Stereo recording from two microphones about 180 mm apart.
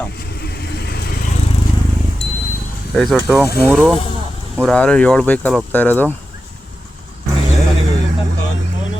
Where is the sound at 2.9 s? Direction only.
Centre (ahead or behind).